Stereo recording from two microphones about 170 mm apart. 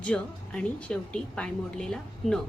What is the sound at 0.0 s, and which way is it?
A woman's voice, 5° left (ahead or behind).